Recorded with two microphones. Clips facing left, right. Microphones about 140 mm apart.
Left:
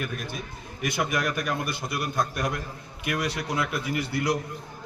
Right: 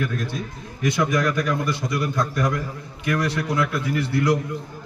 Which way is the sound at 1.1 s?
90° right.